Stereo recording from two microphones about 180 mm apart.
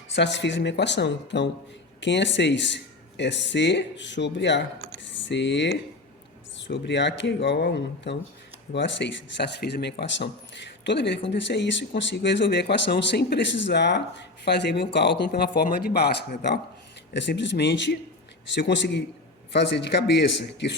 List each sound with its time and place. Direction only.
0.1 s speech: 75° left (ahead or behind)
5.0 s speech: 90° left; by 16.6 s 65° left (ahead or behind)
17.2 s speech: 80° left